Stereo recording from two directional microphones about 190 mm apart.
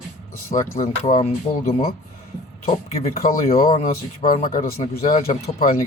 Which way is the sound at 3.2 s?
45° left (ahead or behind).